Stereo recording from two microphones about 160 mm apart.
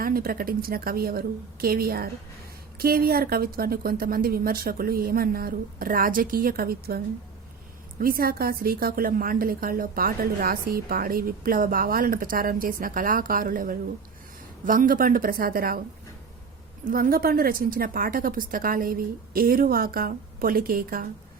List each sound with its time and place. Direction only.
0.0 s a woman's voice: 65° right (ahead or behind)
16.8 s a woman's voice: 65° right (ahead or behind)